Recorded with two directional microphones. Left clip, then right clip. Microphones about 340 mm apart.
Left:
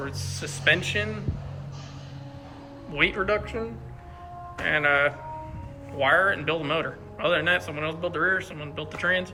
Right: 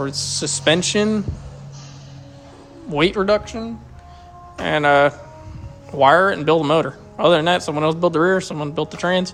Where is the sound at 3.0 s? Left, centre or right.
Centre.